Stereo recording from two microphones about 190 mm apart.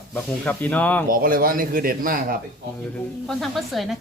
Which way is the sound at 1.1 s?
50° right (ahead or behind).